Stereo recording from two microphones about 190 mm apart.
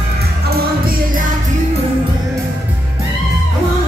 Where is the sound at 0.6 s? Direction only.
50° right (ahead or behind).